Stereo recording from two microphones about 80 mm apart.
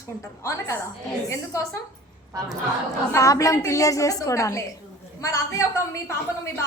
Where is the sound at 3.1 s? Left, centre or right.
Left.